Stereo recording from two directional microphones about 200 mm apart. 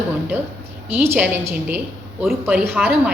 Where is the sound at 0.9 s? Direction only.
10° right (ahead or behind).